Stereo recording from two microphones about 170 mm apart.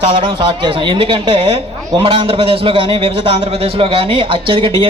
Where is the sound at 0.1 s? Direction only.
30° right (ahead or behind).